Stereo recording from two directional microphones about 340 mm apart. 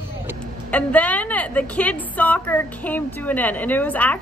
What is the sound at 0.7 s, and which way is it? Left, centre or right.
A woman's voice, centre.